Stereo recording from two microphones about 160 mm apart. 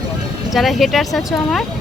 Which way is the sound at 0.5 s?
Centre (ahead or behind).